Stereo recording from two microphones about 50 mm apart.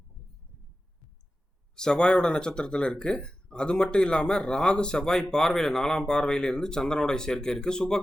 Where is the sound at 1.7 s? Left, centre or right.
Centre.